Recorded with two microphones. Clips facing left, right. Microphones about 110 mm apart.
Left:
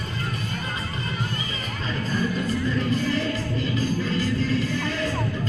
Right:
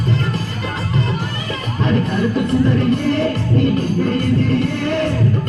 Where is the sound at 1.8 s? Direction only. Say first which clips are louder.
Right 10 dB; 65° right (ahead or behind).